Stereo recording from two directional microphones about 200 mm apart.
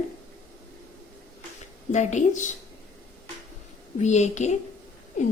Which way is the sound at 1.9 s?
35° left (ahead or behind).